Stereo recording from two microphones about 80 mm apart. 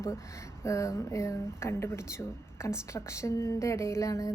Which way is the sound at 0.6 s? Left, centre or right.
Left.